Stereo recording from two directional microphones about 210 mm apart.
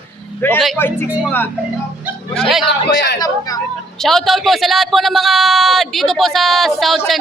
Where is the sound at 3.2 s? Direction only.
15° left (ahead or behind).